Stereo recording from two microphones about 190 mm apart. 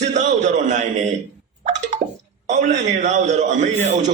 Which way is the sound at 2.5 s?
40° right (ahead or behind).